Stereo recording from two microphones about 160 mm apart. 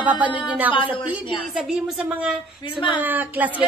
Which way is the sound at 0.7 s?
30° left (ahead or behind).